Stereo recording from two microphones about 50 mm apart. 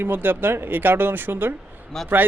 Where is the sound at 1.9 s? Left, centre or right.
Centre.